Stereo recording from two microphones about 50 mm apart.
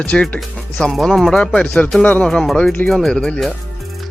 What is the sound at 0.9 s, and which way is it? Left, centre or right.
Speech, centre.